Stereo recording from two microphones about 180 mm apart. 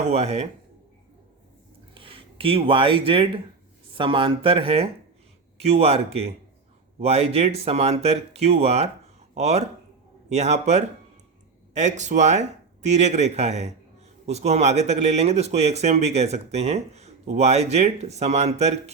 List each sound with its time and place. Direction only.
0.1 s speech: 35° right (ahead or behind)
2.0 s speech: 30° right (ahead or behind)